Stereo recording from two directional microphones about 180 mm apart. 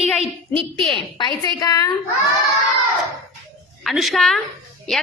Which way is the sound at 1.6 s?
20° left (ahead or behind).